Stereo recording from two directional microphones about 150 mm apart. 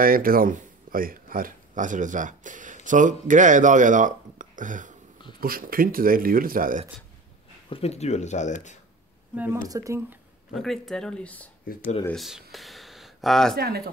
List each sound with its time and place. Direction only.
0.0 s speech: 70° right (ahead or behind)
5.4 s speech: 75° right (ahead or behind)
7.7 s speech: 45° left (ahead or behind)
9.3 s speech: 10° right (ahead or behind)
9.6 s speech: 20° right (ahead or behind)
10.5 s speech: centre (ahead or behind)
13.6 s speech: 90° right